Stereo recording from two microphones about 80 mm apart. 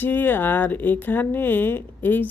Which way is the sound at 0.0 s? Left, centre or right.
Left.